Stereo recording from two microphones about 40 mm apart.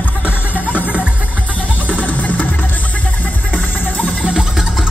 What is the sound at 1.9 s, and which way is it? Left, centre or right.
Music, left.